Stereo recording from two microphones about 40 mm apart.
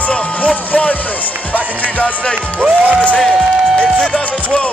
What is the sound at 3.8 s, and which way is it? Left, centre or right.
Speech, centre.